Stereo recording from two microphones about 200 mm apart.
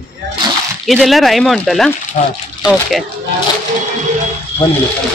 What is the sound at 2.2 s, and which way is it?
Speech, 40° left (ahead or behind).